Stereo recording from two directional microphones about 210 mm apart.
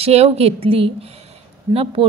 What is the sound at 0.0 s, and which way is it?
A woman's voice, 30° right (ahead or behind).